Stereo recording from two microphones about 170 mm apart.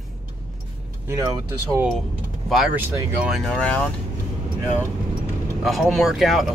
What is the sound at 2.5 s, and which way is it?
Speech, 5° right (ahead or behind).